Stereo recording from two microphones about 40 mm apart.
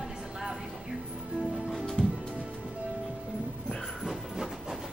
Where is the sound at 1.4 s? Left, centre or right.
Centre.